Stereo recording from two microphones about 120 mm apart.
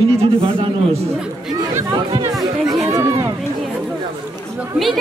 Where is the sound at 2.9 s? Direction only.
25° right (ahead or behind).